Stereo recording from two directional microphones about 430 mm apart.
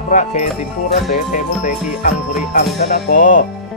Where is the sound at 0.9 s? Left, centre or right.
Centre.